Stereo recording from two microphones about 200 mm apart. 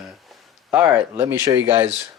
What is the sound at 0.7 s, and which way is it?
Speech, 15° right (ahead or behind).